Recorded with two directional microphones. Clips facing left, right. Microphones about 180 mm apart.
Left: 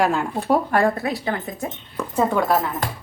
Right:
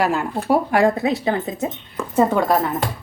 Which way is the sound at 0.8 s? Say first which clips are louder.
Right 3 dB; 20° right (ahead or behind).